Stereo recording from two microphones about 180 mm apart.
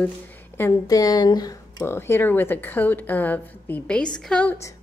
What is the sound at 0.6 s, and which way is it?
A woman's voice, 15° left (ahead or behind).